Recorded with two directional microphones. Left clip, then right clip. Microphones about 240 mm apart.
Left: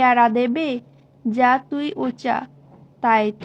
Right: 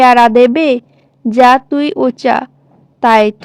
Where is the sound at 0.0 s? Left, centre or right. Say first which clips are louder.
Right 10 dB; right.